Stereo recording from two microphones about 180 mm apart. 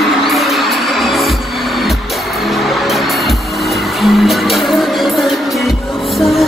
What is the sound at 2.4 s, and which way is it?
Music, centre (ahead or behind).